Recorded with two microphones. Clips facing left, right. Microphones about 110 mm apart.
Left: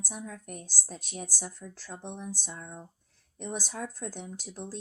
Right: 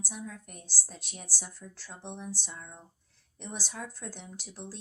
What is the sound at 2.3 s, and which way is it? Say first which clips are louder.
A woman's voice: left 2 dB; 45° left (ahead or behind).